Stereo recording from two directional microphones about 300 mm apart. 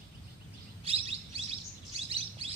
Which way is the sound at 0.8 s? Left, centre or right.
Centre.